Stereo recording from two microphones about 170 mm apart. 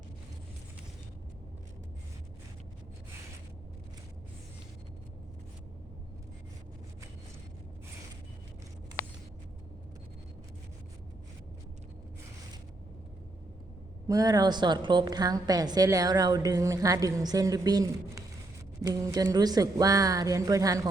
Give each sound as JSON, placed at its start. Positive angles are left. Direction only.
{"t": 14.1, "sound": "a woman's voice", "side_deg": -20}